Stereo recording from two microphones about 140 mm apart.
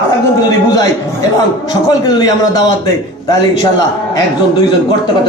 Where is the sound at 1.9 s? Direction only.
30° left (ahead or behind).